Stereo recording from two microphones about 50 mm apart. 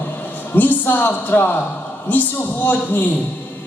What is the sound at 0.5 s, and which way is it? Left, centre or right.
A man's voice, left.